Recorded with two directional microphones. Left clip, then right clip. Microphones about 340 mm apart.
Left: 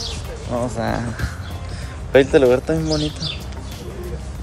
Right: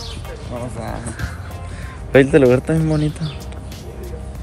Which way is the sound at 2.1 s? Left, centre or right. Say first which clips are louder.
Right 1 dB; right.